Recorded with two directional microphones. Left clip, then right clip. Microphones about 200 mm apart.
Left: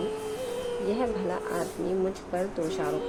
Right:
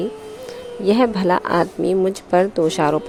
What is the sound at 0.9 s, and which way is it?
A woman's voice, 50° right (ahead or behind).